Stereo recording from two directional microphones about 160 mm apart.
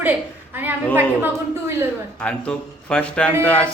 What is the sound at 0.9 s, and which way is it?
Speech, 15° right (ahead or behind).